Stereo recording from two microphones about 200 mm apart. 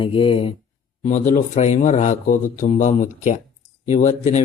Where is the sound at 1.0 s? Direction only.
35° left (ahead or behind).